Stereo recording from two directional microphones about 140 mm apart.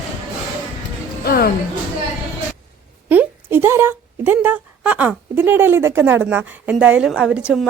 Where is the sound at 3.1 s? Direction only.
15° right (ahead or behind).